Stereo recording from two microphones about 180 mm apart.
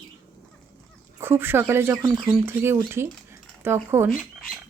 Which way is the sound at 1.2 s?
10° right (ahead or behind).